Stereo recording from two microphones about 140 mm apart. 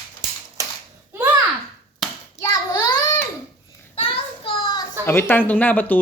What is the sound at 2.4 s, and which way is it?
Child singing, 15° left (ahead or behind).